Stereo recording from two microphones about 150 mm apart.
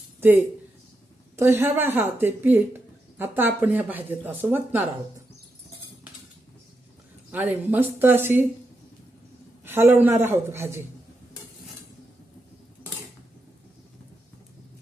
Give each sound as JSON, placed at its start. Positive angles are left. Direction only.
{"t": 1.4, "sound": "speech", "side_deg": -15}
{"t": 7.3, "sound": "speech", "side_deg": -10}
{"t": 9.6, "sound": "speech", "side_deg": -15}